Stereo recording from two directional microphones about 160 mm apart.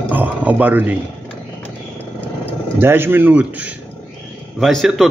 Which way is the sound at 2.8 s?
15° right (ahead or behind).